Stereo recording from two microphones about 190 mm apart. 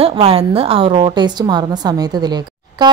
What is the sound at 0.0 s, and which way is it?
Speech, 30° right (ahead or behind).